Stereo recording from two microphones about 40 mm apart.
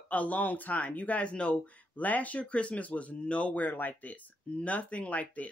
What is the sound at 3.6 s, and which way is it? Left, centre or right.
Speech, left.